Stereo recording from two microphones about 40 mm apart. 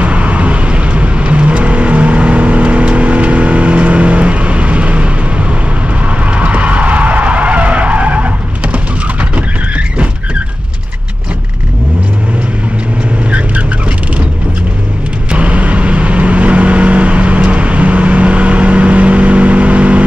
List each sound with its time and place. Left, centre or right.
0.0 s vehicle: right
6.3 s skidding: right
15.3 s vehicle: right